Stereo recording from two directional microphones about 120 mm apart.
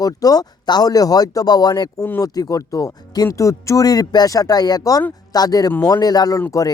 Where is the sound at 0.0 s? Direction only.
30° left (ahead or behind).